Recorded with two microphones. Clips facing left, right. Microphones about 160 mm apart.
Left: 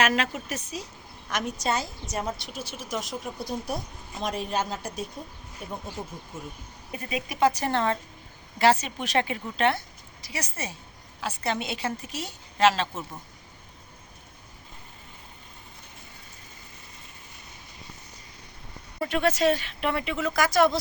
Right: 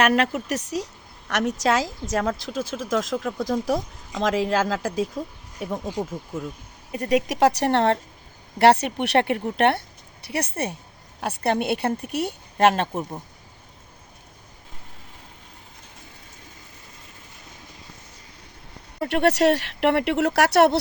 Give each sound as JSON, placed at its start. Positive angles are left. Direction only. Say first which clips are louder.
{"t": 0.0, "sound": "a woman's voice", "louder": "right 5 dB", "side_deg": -60}
{"t": 7.0, "sound": "a woman's voice", "louder": "right 6 dB", "side_deg": -80}
{"t": 13.0, "sound": "speech", "louder": "right 7 dB", "side_deg": -35}
{"t": 18.9, "sound": "speech", "louder": "right 5 dB", "side_deg": -65}